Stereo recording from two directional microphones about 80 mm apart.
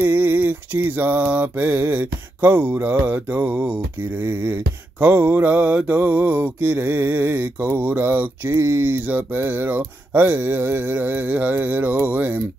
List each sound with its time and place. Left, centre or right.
0.0 s mantra: right